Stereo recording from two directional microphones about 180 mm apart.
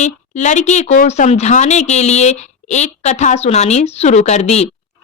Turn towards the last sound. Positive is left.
turn(degrees=40)  # may be behind; listen again after turning